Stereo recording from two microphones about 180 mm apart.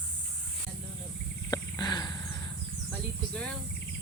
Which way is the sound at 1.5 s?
25° left (ahead or behind).